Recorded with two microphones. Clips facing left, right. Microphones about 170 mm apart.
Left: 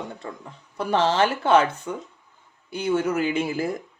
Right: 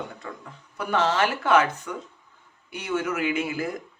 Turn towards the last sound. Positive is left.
turn(degrees=30)  # may be behind; listen again after turning